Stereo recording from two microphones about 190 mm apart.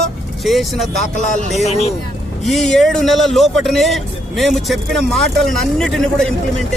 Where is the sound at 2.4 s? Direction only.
Centre (ahead or behind).